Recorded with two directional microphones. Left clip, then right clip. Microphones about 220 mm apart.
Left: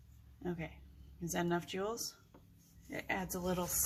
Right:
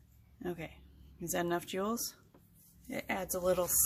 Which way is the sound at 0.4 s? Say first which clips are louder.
Right 2 dB; 50° right (ahead or behind).